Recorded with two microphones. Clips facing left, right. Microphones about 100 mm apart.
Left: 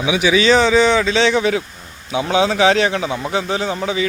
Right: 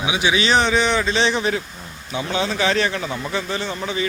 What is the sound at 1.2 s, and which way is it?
A man's voice, 90° left.